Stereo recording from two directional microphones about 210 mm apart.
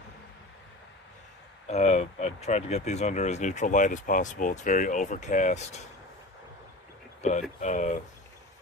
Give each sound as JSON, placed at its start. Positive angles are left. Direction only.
{"t": 1.7, "sound": "speech", "side_deg": 30}
{"t": 7.2, "sound": "speech", "side_deg": 35}